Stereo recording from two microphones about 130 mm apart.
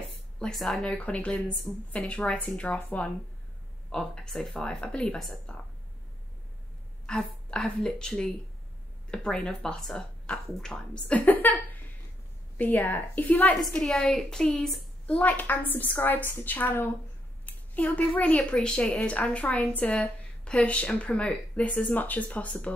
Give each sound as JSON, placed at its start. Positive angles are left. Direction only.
{"t": 0.4, "sound": "a woman's voice", "side_deg": 0}
{"t": 7.1, "sound": "a woman's voice", "side_deg": 5}